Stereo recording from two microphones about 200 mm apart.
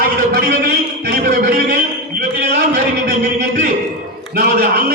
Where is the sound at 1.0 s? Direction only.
50° right (ahead or behind).